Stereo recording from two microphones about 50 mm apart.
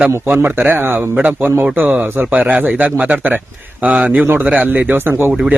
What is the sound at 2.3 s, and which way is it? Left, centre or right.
Speech, right.